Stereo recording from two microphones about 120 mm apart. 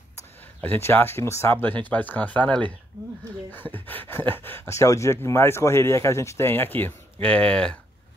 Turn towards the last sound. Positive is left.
turn(degrees=10)  # may be behind; listen again after turning